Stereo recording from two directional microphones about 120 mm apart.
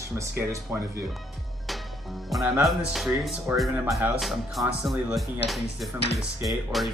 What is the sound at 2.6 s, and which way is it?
Speech, centre (ahead or behind).